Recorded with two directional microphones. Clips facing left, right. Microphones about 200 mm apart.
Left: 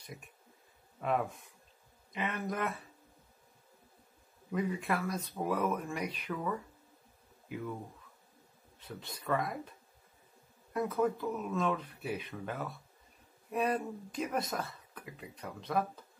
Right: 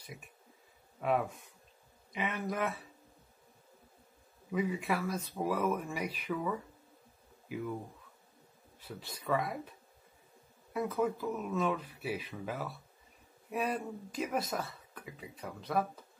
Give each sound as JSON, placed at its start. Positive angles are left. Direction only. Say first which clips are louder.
{"t": 1.0, "sound": "speech", "louder": "right 1 dB", "side_deg": -5}
{"t": 4.5, "sound": "speech", "louder": "right 1 dB", "side_deg": -5}
{"t": 8.7, "sound": "speech", "louder": "even", "side_deg": -5}
{"t": 10.7, "sound": "speech", "louder": "left 1 dB", "side_deg": -5}